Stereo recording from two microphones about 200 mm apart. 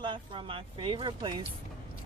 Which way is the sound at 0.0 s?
25° right (ahead or behind).